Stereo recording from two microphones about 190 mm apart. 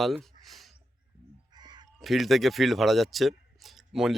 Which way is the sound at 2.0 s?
Centre (ahead or behind).